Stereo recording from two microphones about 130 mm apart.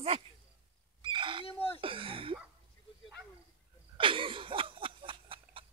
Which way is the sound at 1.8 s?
45° right (ahead or behind).